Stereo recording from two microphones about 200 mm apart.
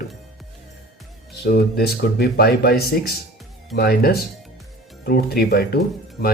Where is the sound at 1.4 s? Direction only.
50° left (ahead or behind).